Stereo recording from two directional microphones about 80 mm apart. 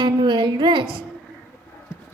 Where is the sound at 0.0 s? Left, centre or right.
Right.